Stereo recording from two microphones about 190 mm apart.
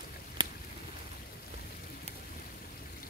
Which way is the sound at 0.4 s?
20° right (ahead or behind).